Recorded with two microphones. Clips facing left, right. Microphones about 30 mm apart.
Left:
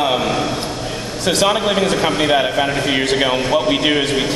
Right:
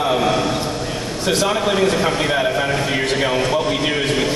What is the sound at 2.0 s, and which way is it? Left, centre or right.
A man's voice, centre.